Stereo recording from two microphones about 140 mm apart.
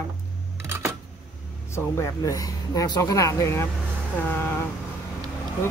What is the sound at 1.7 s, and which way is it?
Speech, 20° left (ahead or behind).